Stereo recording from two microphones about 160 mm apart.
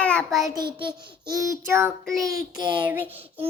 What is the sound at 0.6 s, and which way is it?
Child singing, 30° right (ahead or behind).